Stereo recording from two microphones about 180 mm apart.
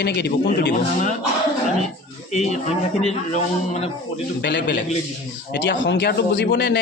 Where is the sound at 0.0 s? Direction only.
65° left (ahead or behind).